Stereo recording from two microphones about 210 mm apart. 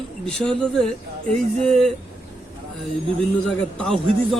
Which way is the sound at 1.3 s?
35° right (ahead or behind).